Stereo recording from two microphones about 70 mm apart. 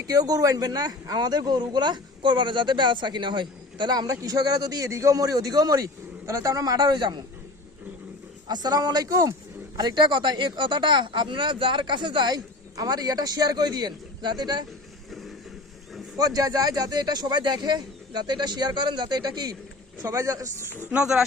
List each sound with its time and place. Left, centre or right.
0.0 s speech: right
4.9 s a man's voice: right
8.4 s speech: right
9.7 s speech: right
16.1 s speech: right
20.1 s a man's voice: right
20.9 s speech: centre